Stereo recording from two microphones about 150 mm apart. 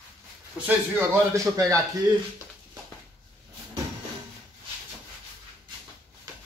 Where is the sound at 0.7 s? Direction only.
15° right (ahead or behind).